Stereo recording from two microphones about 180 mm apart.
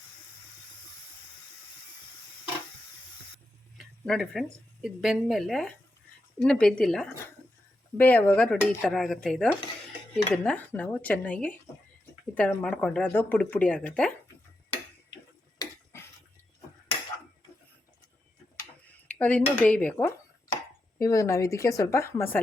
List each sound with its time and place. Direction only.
3.8 s speech: 5° left (ahead or behind)
15.5 s a sound: 15° left (ahead or behind)
19.0 s dishes: 10° left (ahead or behind)
19.5 s speech: 5° left (ahead or behind)